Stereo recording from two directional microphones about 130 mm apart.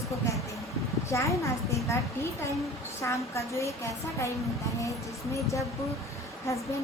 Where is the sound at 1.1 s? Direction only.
25° left (ahead or behind).